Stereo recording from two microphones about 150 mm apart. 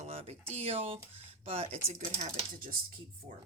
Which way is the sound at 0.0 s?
45° right (ahead or behind).